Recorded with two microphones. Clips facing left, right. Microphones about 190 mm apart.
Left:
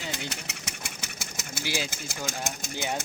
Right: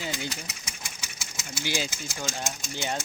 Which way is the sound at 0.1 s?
65° left (ahead or behind).